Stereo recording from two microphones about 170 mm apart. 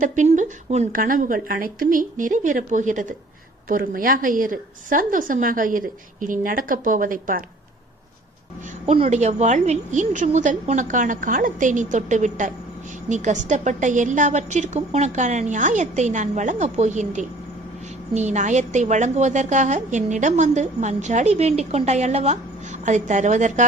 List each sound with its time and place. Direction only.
0.0 s a woman's voice: 45° right (ahead or behind)
8.6 s a woman's voice: 40° right (ahead or behind)